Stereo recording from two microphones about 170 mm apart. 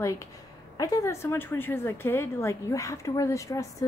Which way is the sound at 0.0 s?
20° left (ahead or behind).